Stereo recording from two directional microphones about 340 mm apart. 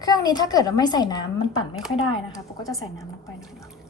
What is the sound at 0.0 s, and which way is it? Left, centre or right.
A woman's voice, centre.